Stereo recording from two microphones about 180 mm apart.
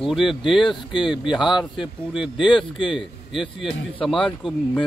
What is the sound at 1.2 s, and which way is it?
Speech, 5° right (ahead or behind).